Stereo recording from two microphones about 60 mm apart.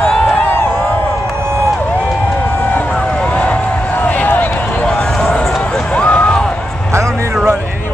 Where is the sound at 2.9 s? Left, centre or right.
Centre.